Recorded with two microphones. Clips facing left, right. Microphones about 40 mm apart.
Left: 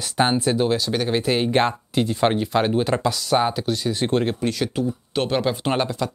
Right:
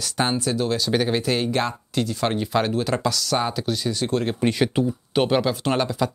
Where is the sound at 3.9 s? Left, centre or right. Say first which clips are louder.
Left 4 dB; left.